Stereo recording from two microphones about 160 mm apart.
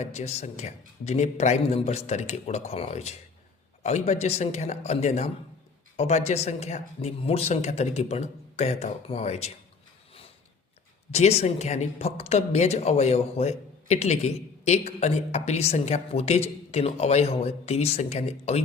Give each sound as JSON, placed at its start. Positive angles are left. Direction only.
{"t": 0.0, "sound": "speech", "side_deg": 45}
{"t": 11.1, "sound": "speech", "side_deg": 40}